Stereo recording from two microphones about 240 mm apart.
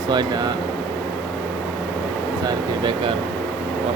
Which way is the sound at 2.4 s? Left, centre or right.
Centre.